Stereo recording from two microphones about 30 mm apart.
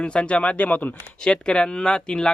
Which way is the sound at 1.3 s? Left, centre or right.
Left.